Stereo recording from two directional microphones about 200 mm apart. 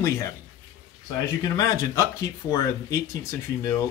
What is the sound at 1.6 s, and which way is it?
Speech, 15° left (ahead or behind).